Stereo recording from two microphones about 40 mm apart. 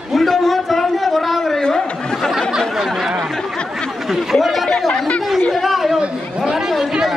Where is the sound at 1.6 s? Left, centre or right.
Centre.